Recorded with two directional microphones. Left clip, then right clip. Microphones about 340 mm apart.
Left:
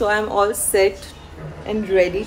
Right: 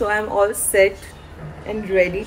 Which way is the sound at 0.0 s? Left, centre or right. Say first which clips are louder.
Left 1 dB; centre.